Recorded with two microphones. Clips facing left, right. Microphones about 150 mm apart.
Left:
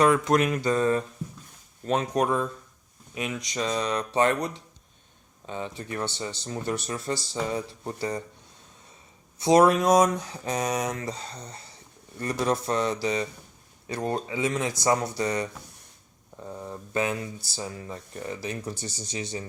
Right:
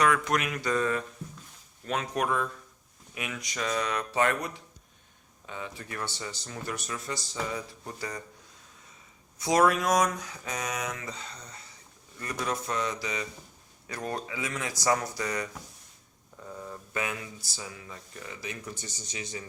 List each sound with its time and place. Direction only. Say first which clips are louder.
0.0 s speech: left 5 dB; 30° left (ahead or behind)
5.5 s speech: left 6 dB; 30° left (ahead or behind)
9.4 s speech: left 5 dB; 25° left (ahead or behind)